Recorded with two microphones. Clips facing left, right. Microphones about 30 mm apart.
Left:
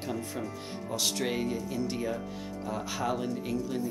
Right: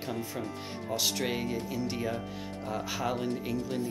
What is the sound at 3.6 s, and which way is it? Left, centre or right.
Speech, right.